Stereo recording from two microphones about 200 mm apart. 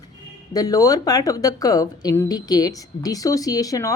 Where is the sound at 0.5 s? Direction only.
15° left (ahead or behind).